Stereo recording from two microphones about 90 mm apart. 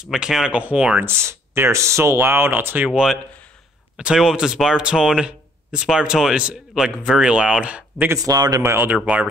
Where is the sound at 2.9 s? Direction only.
5° right (ahead or behind).